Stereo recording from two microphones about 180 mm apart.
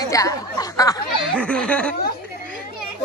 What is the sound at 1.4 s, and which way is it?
Speech, 5° left (ahead or behind).